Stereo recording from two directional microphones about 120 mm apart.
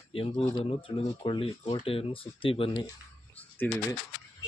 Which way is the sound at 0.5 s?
50° left (ahead or behind).